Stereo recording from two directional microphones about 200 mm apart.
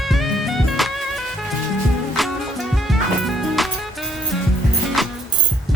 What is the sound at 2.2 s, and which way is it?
Music, centre (ahead or behind).